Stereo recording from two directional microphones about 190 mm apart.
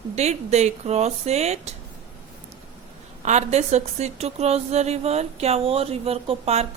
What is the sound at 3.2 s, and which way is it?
A woman's voice, 35° right (ahead or behind).